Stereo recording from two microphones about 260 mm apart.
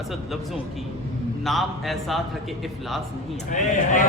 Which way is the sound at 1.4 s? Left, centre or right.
Centre.